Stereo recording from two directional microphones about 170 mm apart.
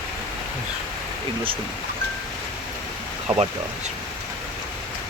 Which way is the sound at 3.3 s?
15° right (ahead or behind).